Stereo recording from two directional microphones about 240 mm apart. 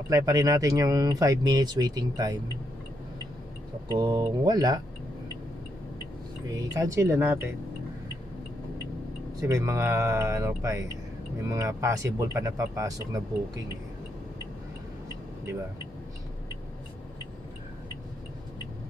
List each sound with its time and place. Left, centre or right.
0.1 s speech: centre
3.9 s speech: centre
6.4 s speech: centre
9.5 s speech: centre